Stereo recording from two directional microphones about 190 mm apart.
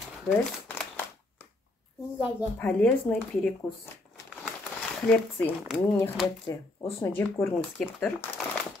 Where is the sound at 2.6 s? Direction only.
10° left (ahead or behind).